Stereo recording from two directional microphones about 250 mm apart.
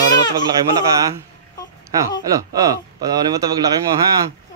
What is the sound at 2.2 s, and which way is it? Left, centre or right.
Speech, centre.